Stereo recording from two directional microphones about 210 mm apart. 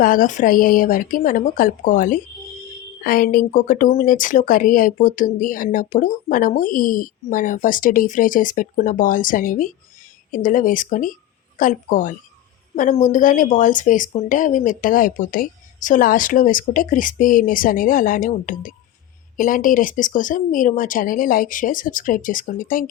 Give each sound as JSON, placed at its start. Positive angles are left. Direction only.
{"t": 0.0, "sound": "speech", "side_deg": 40}